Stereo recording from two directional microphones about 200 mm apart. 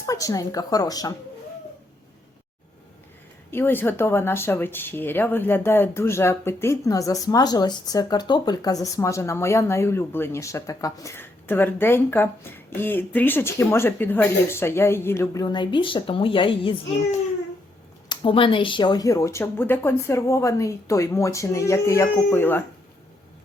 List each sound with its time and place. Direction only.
0.0 s speech: 15° left (ahead or behind)
3.5 s speech: 10° left (ahead or behind)